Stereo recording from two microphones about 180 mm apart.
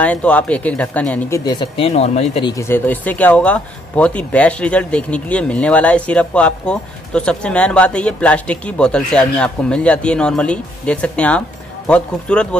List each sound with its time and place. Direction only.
0.0 s speech: 5° left (ahead or behind)
1.4 s speech: 25° left (ahead or behind)
2.5 s speech: 15° left (ahead or behind)